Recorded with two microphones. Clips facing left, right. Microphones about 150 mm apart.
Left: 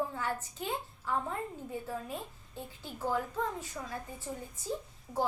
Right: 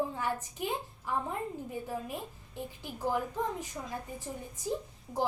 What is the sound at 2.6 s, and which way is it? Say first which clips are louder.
Speech: right 2 dB; 15° right (ahead or behind).